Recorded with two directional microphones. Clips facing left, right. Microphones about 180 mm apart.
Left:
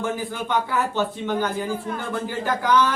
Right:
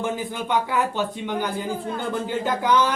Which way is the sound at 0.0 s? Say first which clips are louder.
Even; 15° right (ahead or behind).